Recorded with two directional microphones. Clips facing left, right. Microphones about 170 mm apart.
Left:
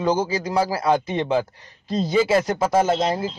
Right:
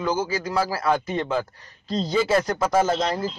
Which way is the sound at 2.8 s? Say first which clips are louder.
Left 2 dB; 25° left (ahead or behind).